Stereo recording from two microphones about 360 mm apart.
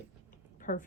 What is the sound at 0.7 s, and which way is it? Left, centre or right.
Speech, left.